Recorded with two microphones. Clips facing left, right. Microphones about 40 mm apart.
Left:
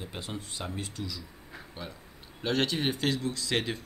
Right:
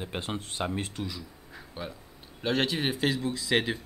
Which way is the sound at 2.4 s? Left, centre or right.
Centre.